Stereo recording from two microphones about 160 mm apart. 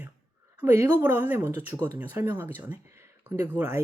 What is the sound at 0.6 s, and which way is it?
Speech, 15° right (ahead or behind).